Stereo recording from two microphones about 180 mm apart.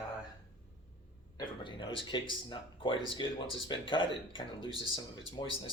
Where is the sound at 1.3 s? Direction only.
25° left (ahead or behind).